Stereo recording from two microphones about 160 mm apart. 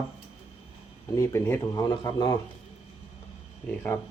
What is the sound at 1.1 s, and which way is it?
Speech, 15° left (ahead or behind).